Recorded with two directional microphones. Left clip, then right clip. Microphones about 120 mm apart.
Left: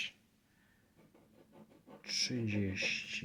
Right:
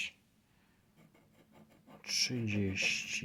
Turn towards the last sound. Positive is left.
turn(degrees=-35)  # may be behind; listen again after turning